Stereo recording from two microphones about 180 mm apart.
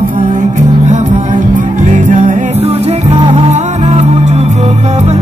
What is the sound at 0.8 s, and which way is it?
Music, 40° right (ahead or behind).